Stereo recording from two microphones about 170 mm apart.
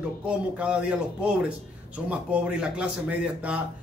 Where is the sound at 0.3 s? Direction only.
5° right (ahead or behind).